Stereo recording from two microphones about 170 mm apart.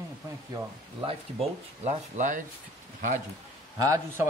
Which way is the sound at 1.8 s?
50° right (ahead or behind).